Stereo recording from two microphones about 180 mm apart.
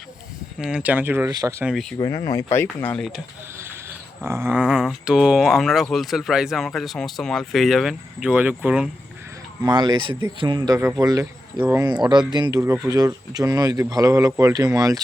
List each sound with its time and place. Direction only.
0.6 s speech: 5° right (ahead or behind)
1.6 s speech: centre (ahead or behind)
2.0 s speech: 20° left (ahead or behind)
3.6 s speech: 15° right (ahead or behind)
9.6 s speech: 25° right (ahead or behind)